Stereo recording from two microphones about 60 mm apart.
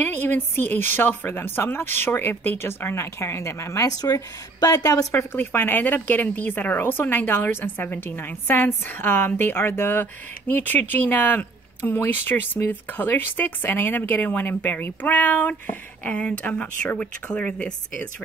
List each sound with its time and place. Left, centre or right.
0.0 s speech: left
4.6 s a woman's voice: left
5.1 s speech: left; by 18.0 s centre